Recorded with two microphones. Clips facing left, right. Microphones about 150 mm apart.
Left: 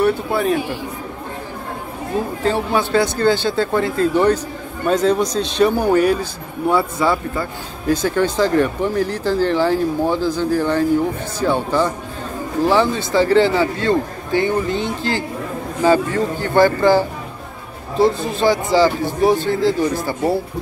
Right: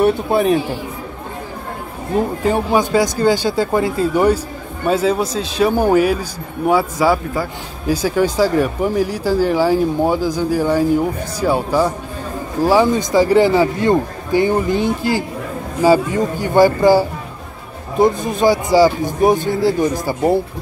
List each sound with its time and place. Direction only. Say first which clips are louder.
0.0 s speech: right 3 dB; 20° right (ahead or behind)
2.4 s speech: right 1 dB; 15° right (ahead or behind)
14.4 s speech: right 4 dB; 25° left (ahead or behind)
15.0 s speech: right 3 dB; 10° right (ahead or behind)
18.0 s speech: right 2 dB; 15° right (ahead or behind)